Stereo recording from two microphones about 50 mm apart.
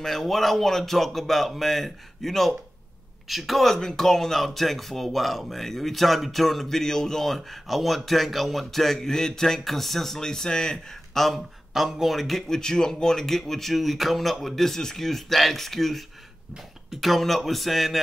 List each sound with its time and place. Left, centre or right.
0.0 s speech: centre